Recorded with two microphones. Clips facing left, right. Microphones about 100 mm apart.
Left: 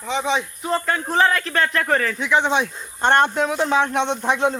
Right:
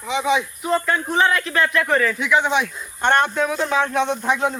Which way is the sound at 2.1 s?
30° left (ahead or behind).